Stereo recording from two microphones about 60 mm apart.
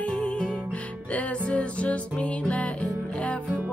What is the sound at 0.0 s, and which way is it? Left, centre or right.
Music, centre.